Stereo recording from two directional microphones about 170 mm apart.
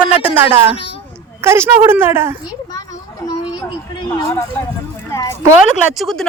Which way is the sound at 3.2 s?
25° left (ahead or behind).